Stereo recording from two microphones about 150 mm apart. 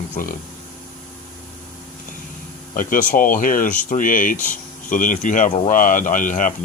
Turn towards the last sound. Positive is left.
turn(degrees=60)  # may be behind; listen again after turning